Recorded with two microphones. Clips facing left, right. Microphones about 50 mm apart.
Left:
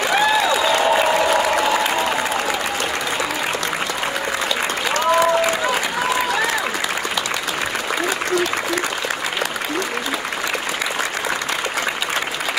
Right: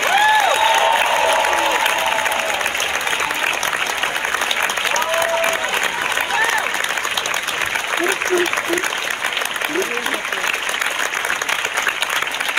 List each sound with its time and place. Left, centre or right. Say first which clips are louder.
0.2 s applause: right 4 dB; right
4.9 s applause: left 5 dB; right